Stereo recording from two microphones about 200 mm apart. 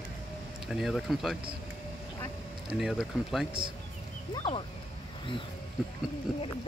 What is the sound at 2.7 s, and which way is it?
Speech, 5° right (ahead or behind).